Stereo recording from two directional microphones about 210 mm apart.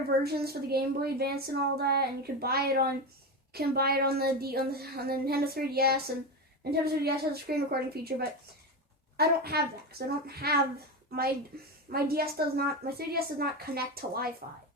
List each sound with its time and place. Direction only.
0.2 s a woman's voice: 50° right (ahead or behind)